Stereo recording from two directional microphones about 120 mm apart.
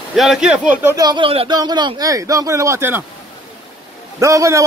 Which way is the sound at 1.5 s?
35° right (ahead or behind).